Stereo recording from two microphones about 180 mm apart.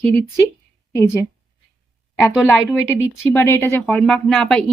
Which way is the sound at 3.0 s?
15° left (ahead or behind).